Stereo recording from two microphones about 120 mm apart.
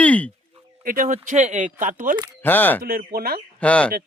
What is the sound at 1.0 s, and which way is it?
Speech, 90° right.